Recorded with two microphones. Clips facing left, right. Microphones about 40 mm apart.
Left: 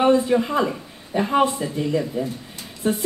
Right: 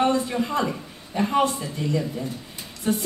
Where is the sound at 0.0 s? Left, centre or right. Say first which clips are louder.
Left 5 dB; centre.